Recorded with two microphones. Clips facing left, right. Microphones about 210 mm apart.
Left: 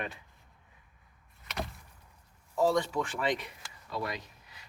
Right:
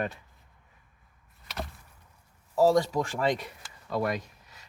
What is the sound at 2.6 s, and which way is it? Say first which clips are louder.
Speech: right 5 dB; 40° right (ahead or behind).